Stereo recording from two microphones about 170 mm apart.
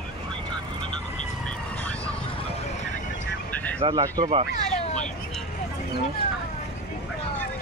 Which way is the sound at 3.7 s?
25° right (ahead or behind).